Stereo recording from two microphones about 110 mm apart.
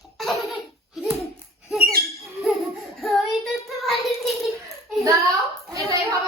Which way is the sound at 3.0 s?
Centre (ahead or behind).